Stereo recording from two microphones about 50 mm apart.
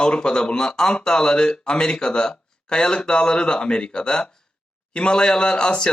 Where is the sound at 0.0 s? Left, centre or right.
Centre.